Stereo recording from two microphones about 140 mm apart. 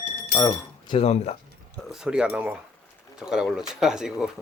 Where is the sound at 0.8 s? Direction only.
45° left (ahead or behind).